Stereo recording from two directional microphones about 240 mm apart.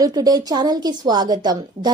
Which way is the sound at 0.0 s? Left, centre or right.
Centre.